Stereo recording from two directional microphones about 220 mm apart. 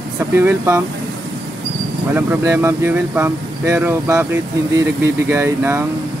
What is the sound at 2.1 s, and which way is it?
Speech, 10° right (ahead or behind).